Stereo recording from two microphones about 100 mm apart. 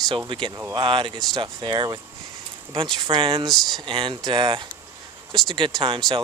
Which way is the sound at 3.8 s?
55° right (ahead or behind).